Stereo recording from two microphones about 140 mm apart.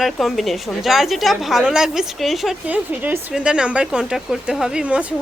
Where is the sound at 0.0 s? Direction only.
Centre (ahead or behind).